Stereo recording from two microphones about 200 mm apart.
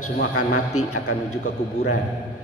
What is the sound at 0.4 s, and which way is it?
Speech, 90° left.